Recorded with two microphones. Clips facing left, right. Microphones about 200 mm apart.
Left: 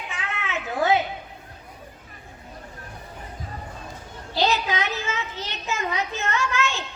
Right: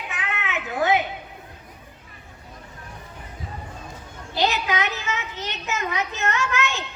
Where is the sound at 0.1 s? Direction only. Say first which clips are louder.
Right 1 dB; 20° right (ahead or behind).